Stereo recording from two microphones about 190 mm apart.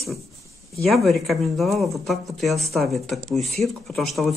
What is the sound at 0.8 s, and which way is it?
Speech, centre (ahead or behind).